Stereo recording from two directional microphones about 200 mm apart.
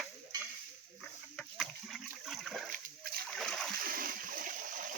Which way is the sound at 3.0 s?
50° right (ahead or behind).